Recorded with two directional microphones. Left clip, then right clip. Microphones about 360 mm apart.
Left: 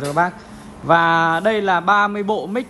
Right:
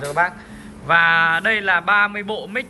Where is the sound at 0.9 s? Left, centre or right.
Centre.